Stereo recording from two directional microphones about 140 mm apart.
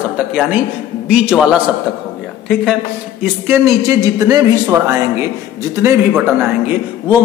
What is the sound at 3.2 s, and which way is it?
A man's voice, 20° right (ahead or behind).